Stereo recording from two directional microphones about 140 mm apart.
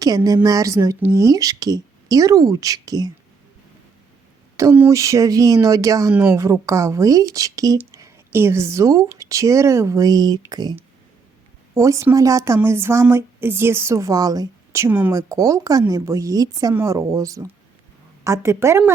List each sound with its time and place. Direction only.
0.4 s a woman's voice: 25° right (ahead or behind)
4.5 s a woman's voice: 15° right (ahead or behind)
15.1 s a woman's voice: 25° right (ahead or behind)